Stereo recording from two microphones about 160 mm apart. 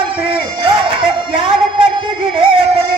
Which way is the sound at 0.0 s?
30° right (ahead or behind).